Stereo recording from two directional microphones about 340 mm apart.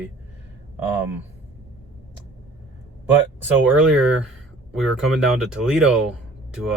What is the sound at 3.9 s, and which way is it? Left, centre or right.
Speech, centre.